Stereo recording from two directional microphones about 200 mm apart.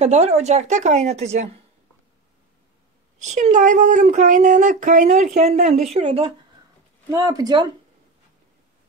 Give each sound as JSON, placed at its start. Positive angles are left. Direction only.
{"t": 0.0, "sound": "speech", "side_deg": -35}
{"t": 3.2, "sound": "speech", "side_deg": -35}
{"t": 7.1, "sound": "speech", "side_deg": -20}